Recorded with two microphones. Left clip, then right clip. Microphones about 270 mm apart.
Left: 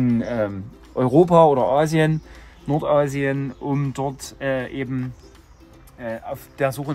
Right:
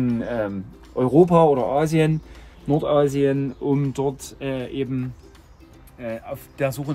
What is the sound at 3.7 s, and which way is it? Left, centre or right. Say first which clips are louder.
Speech: right 2 dB; left.